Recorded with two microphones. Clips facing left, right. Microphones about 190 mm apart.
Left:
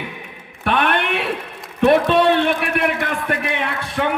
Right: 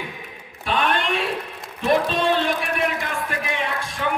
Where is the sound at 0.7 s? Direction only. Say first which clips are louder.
Left 3 dB; 60° left (ahead or behind).